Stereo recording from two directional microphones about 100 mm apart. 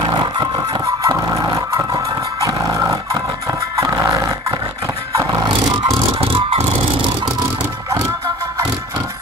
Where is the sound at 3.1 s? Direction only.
35° right (ahead or behind).